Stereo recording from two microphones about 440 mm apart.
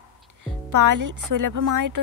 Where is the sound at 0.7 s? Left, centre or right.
Right.